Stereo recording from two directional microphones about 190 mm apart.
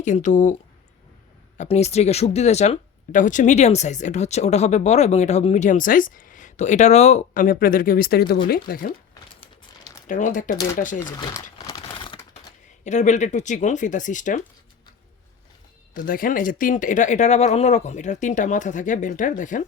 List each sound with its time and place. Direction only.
0.0 s speech: 40° left (ahead or behind)
1.5 s speech: 35° left (ahead or behind); by 8.9 s 50° left (ahead or behind)
9.4 s crumpling: 20° left (ahead or behind)
10.1 s speech: 40° left (ahead or behind)
11.0 s speech: 15° left (ahead or behind)
11.6 s typing: 25° left (ahead or behind)
12.8 s speech: 40° left (ahead or behind)
16.0 s speech: 45° left (ahead or behind)